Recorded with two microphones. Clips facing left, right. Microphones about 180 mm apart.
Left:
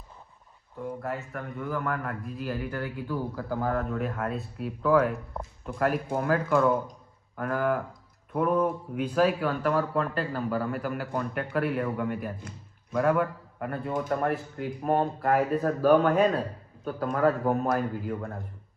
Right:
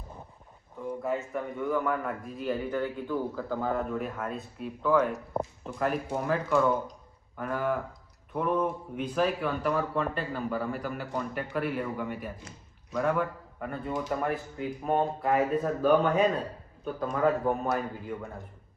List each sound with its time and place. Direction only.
0.8 s a man's voice: centre (ahead or behind)